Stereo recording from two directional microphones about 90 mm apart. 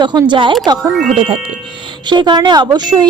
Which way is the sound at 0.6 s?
45° right (ahead or behind).